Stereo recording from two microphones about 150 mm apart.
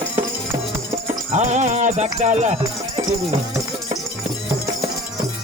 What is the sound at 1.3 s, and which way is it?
Music, 50° right (ahead or behind).